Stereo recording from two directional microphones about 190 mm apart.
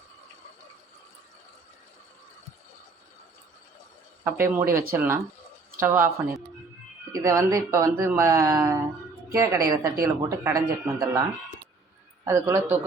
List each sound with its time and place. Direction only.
4.2 s speech: 10° right (ahead or behind)